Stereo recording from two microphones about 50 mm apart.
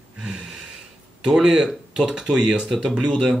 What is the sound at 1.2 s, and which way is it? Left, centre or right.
Speech, centre.